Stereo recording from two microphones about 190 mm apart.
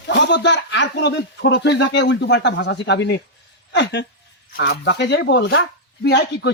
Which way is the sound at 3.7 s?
65° left (ahead or behind).